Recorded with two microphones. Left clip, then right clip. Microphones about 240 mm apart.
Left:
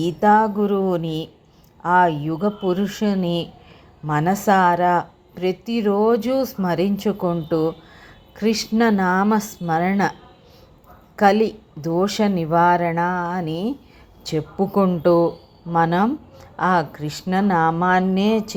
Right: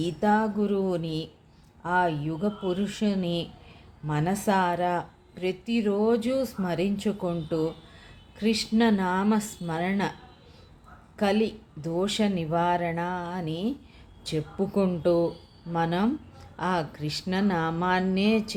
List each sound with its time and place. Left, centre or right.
0.0 s speech: centre
11.2 s speech: centre